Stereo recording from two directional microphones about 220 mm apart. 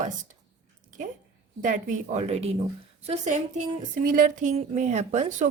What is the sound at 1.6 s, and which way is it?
Speech, 35° right (ahead or behind).